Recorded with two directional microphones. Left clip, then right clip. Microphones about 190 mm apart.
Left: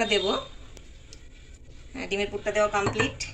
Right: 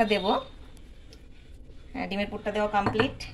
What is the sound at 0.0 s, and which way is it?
Speech, 50° right (ahead or behind).